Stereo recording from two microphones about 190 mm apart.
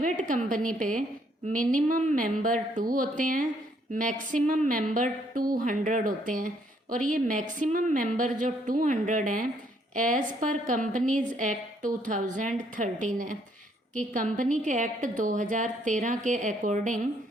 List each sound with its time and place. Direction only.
0.0 s a woman's voice: 45° right (ahead or behind)